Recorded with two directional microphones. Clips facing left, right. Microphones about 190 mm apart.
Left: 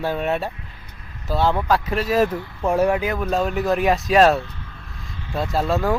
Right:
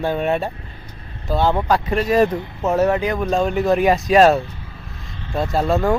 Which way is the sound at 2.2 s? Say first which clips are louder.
Right 3 dB; 20° right (ahead or behind).